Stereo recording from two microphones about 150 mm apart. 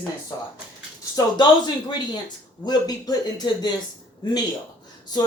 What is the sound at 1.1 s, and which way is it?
Speech, 30° left (ahead or behind).